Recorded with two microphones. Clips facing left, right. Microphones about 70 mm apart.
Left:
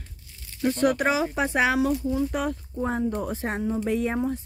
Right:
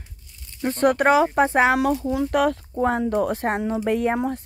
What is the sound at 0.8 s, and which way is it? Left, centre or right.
Speech, right.